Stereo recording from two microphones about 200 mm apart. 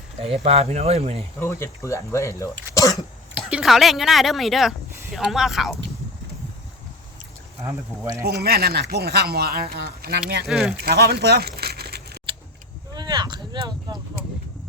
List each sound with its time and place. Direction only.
0.2 s speech: 30° right (ahead or behind)
1.4 s speech: 15° left (ahead or behind)
2.7 s throat clearing: 15° left (ahead or behind)
3.3 s speech: 5° right (ahead or behind)
7.6 s speech: 15° right (ahead or behind)
8.2 s speech: 55° right (ahead or behind)
10.4 s speech: centre (ahead or behind)
10.8 s speech: 55° right (ahead or behind)
12.3 s keys jangling: 25° right (ahead or behind)
12.9 s a sound: 20° right (ahead or behind)